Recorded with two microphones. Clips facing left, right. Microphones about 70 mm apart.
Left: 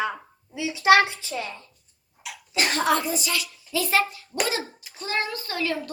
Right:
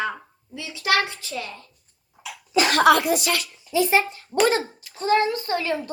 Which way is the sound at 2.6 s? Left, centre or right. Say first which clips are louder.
Right 6 dB; right.